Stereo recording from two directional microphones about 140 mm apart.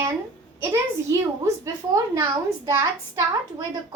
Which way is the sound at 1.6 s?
20° right (ahead or behind).